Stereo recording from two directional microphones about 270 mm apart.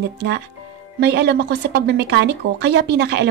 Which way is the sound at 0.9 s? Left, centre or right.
Right.